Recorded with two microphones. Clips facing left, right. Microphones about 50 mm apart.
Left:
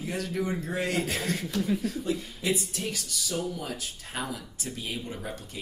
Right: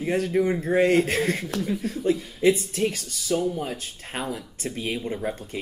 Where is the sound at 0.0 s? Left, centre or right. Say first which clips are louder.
Right 8 dB; right.